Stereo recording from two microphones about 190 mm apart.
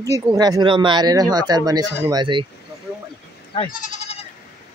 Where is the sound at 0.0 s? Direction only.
20° right (ahead or behind).